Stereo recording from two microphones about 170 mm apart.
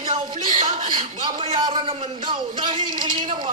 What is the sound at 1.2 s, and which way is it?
A man's voice, 25° right (ahead or behind).